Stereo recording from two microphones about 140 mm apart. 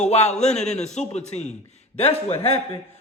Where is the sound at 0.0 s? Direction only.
55° left (ahead or behind).